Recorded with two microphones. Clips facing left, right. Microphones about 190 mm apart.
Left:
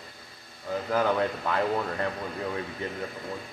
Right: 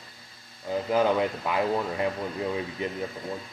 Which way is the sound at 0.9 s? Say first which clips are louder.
Right 2 dB; 15° right (ahead or behind).